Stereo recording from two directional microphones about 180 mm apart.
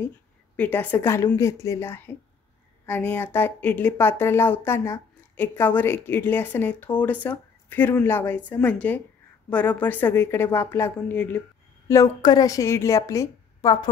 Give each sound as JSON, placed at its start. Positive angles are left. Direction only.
{"t": 0.6, "sound": "speech", "side_deg": 10}